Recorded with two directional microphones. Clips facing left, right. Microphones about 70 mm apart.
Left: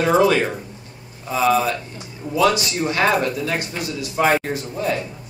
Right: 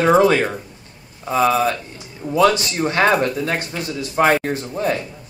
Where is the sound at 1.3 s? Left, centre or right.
Right.